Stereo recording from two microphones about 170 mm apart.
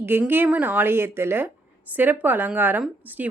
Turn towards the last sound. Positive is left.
turn(degrees=-10)  # may be behind; listen again after turning